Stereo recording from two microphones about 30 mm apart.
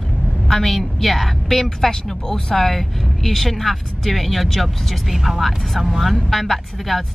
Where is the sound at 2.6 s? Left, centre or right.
Centre.